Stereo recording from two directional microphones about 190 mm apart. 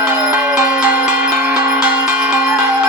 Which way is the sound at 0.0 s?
10° right (ahead or behind).